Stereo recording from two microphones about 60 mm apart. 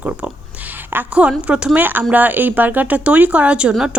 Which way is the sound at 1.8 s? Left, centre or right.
Right.